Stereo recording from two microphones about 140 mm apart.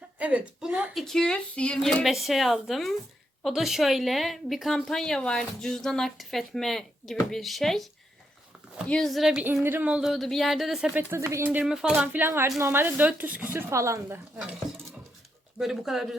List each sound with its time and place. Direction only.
0.2 s a woman's voice: 10° right (ahead or behind)
0.9 s a woman's voice: 5° left (ahead or behind)
8.9 s a woman's voice: 5° left (ahead or behind)
11.1 s a woman's voice: 20° right (ahead or behind)
11.6 s a woman's voice: 5° right (ahead or behind); by 14.2 s 20° right (ahead or behind)
15.5 s a woman's voice: centre (ahead or behind)